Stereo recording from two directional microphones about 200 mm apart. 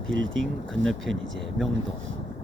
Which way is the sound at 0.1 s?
70° right (ahead or behind).